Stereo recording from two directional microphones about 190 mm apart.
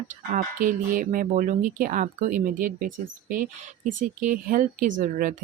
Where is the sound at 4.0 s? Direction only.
45° right (ahead or behind).